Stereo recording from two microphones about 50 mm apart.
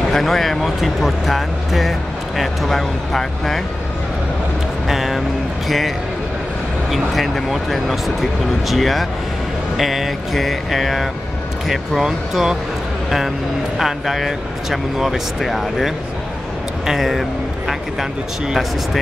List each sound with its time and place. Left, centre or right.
0.1 s speech: centre
4.8 s a sound: centre
5.7 s speech: centre
13.7 s speech: centre